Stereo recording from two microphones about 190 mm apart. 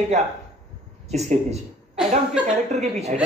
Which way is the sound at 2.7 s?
35° right (ahead or behind).